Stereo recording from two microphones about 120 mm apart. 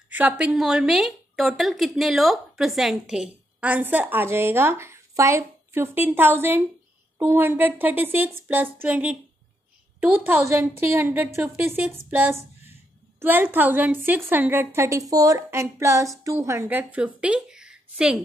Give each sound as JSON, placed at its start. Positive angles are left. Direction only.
{"t": 0.1, "sound": "a woman's voice", "side_deg": -10}
{"t": 16.6, "sound": "a woman's voice", "side_deg": -10}